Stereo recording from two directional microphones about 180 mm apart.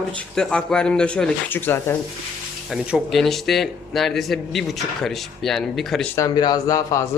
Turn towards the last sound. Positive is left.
turn(degrees=20)  # may be behind; listen again after turning